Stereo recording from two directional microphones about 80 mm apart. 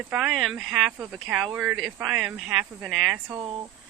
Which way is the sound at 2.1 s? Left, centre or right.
Centre.